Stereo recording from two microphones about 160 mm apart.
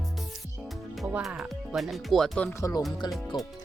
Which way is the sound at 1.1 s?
5° right (ahead or behind).